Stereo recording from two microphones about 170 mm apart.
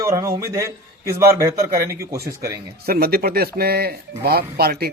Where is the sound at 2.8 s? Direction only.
65° right (ahead or behind).